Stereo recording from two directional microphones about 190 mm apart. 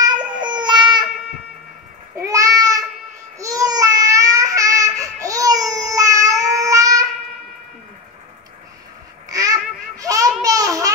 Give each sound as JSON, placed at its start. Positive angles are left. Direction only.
{"t": 0.4, "sound": "baby cry", "side_deg": -25}
{"t": 2.1, "sound": "babbling", "side_deg": -15}
{"t": 9.3, "sound": "babbling", "side_deg": -20}